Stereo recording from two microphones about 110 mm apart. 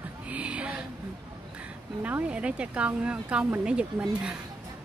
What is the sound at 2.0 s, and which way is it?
Speech, 15° right (ahead or behind).